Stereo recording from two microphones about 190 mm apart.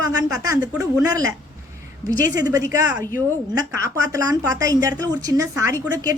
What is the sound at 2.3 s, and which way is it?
A woman's voice, 20° right (ahead or behind).